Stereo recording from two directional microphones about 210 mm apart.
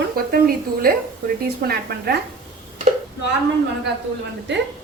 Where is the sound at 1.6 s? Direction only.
50° right (ahead or behind).